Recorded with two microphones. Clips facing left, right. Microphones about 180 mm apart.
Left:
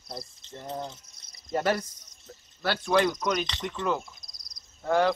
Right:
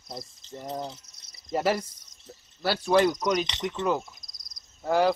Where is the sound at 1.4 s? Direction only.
5° right (ahead or behind).